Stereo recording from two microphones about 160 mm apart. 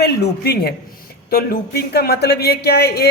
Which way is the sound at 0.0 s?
85° left.